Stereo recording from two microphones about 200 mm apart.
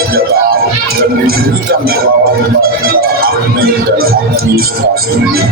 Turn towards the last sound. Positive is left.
turn(degrees=-50)  # may be behind; listen again after turning